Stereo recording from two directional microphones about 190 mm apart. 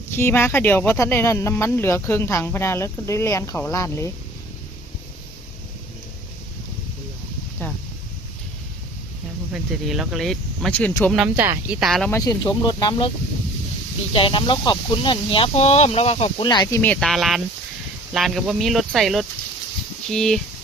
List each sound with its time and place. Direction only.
0.2 s speech: 10° left (ahead or behind)
9.5 s speech: centre (ahead or behind)
12.1 s speech: 20° left (ahead or behind)
14.1 s speech: 25° left (ahead or behind)
16.8 s speech: 5° left (ahead or behind)